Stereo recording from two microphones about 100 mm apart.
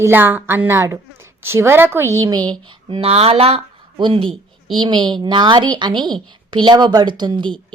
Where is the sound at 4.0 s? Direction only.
55° right (ahead or behind).